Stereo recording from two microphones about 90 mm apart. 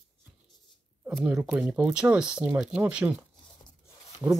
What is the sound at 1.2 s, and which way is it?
Speech, 20° right (ahead or behind).